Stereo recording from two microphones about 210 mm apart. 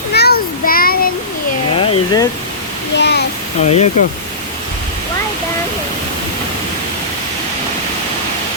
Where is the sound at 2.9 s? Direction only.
55° left (ahead or behind).